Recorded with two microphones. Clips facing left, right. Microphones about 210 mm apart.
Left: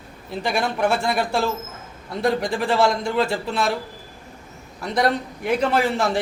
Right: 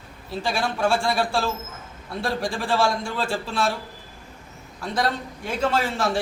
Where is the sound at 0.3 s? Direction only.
20° left (ahead or behind).